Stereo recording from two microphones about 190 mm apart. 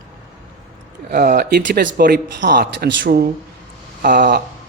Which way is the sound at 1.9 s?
50° right (ahead or behind).